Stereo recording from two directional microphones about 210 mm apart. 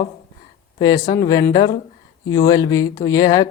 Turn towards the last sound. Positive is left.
turn(degrees=15)  # may be behind; listen again after turning